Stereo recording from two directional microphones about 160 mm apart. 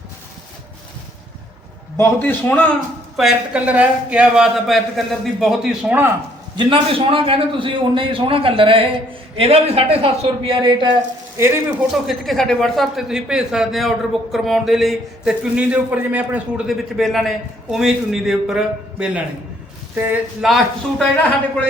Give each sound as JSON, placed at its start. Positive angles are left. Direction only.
{"t": 2.0, "sound": "a man's voice", "side_deg": 15}
{"t": 3.2, "sound": "a man's voice", "side_deg": -5}
{"t": 6.6, "sound": "a man's voice", "side_deg": -35}
{"t": 11.3, "sound": "speech", "side_deg": -15}
{"t": 12.0, "sound": "a man's voice", "side_deg": 0}
{"t": 20.4, "sound": "a man's voice", "side_deg": -5}